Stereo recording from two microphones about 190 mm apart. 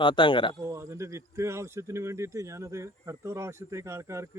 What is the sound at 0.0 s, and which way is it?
Speech, 25° left (ahead or behind).